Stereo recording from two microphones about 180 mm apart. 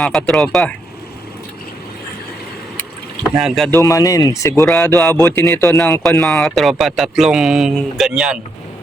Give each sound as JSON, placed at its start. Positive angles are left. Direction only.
{"t": 0.0, "sound": "speech", "side_deg": 5}
{"t": 3.3, "sound": "speech", "side_deg": 0}
{"t": 3.8, "sound": "speech", "side_deg": 20}
{"t": 6.0, "sound": "speech", "side_deg": 0}